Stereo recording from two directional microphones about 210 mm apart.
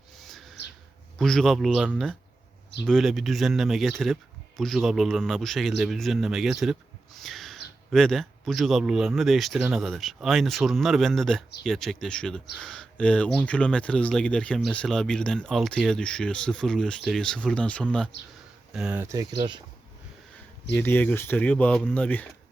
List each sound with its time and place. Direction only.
0.3 s bird: centre (ahead or behind)
1.2 s speech: centre (ahead or behind)
7.2 s owl: centre (ahead or behind)
7.9 s speech: centre (ahead or behind)
18.1 s speech: 55° left (ahead or behind)
18.7 s speech: 5° right (ahead or behind)
19.1 s speech: 20° right (ahead or behind)
20.7 s speech: 10° left (ahead or behind)